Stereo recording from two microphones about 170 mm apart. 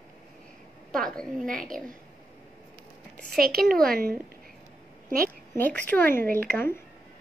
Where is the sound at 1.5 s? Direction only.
55° right (ahead or behind).